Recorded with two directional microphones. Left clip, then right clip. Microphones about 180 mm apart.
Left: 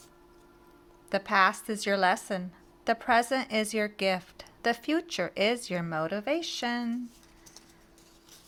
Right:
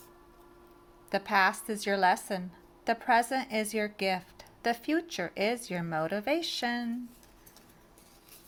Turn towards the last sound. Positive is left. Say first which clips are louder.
# even
turn(degrees=15)  # may be behind; listen again after turning